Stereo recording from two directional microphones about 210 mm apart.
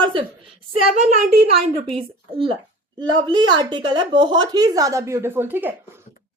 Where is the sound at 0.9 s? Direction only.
35° right (ahead or behind); by 5.7 s 10° right (ahead or behind).